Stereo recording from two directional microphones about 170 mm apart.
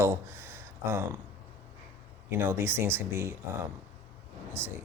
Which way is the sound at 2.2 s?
15° right (ahead or behind).